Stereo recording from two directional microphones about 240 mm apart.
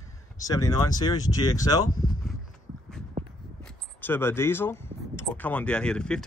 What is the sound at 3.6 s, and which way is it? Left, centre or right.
Speech, centre.